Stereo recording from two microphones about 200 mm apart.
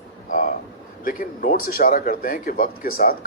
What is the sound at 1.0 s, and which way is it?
Speech, 45° left (ahead or behind).